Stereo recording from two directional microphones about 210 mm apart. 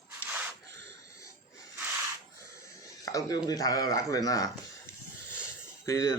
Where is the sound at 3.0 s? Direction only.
15° left (ahead or behind).